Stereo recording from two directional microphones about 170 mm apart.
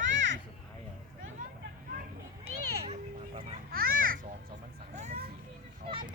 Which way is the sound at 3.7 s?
60° right (ahead or behind).